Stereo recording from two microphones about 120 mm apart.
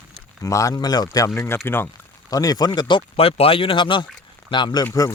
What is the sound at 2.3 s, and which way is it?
Speech, 30° left (ahead or behind).